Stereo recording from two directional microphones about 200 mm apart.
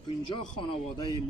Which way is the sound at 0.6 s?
25° left (ahead or behind).